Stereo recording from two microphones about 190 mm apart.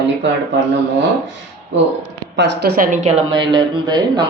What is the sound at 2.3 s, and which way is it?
Speech, 60° right (ahead or behind).